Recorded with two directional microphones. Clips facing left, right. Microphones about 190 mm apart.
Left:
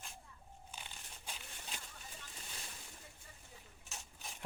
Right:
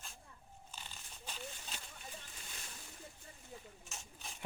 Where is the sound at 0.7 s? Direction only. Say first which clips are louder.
Left 1 dB; 10° left (ahead or behind).